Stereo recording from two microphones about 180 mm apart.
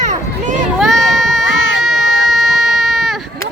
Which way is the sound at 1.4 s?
90° left.